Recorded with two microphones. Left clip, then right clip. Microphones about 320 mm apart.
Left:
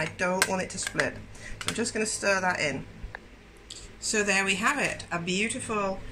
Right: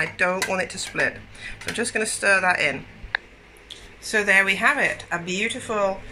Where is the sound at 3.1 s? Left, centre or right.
Right.